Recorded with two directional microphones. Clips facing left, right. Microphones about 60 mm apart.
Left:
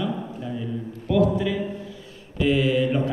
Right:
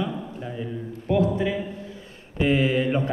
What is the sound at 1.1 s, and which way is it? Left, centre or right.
A man's voice, right.